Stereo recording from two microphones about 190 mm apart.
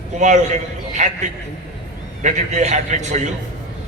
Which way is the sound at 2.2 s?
40° right (ahead or behind).